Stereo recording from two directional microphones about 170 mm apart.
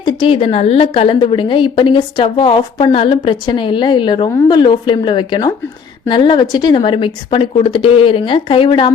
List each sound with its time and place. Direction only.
0.0 s a woman's voice: 30° left (ahead or behind)